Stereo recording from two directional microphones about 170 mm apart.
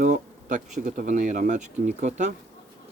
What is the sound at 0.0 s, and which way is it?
Speech, 50° right (ahead or behind).